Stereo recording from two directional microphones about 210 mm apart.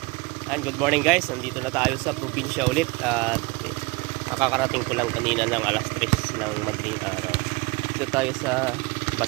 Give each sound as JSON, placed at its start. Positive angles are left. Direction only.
{"t": 0.5, "sound": "speech", "side_deg": 0}
{"t": 4.4, "sound": "speech", "side_deg": 0}
{"t": 8.1, "sound": "speech", "side_deg": -5}